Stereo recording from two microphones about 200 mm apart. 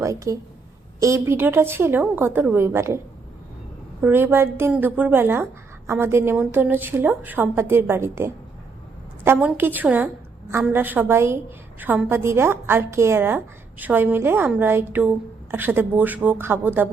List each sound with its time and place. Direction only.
0.0 s a woman's voice: 15° right (ahead or behind)
4.0 s a woman's voice: 10° right (ahead or behind)